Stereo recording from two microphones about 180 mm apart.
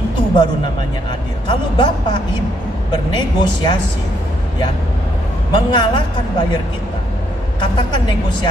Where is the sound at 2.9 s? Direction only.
25° left (ahead or behind).